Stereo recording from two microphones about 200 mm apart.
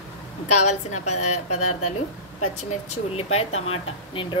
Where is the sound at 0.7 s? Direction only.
35° left (ahead or behind).